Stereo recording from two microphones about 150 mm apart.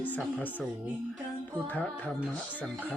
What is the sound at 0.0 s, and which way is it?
Music, 10° left (ahead or behind).